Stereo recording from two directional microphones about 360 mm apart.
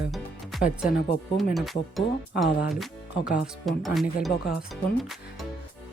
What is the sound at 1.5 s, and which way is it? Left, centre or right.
Speech, centre.